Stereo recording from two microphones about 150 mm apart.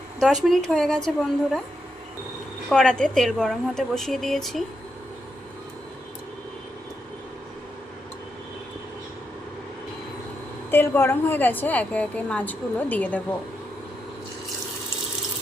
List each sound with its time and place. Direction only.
0.4 s a woman's voice: 5° left (ahead or behind)
2.6 s a woman's voice: 5° left (ahead or behind)
10.7 s a woman's voice: 15° left (ahead or behind)